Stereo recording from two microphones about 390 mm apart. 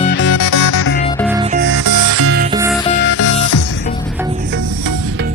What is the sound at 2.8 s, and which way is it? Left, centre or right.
Music, centre.